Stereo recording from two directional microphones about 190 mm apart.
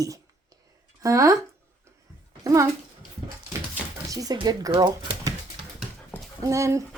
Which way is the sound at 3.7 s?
15° right (ahead or behind).